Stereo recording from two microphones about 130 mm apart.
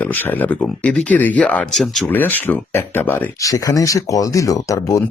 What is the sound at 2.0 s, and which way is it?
Speech, 15° left (ahead or behind).